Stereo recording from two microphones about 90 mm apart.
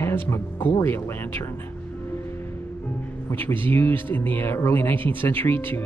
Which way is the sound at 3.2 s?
25° left (ahead or behind).